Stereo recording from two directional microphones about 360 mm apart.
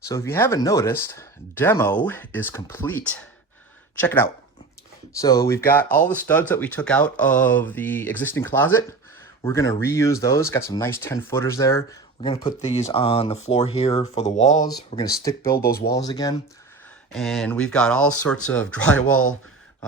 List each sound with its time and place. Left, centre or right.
0.0 s speech: centre
15.5 s speech: left
16.0 s speech: centre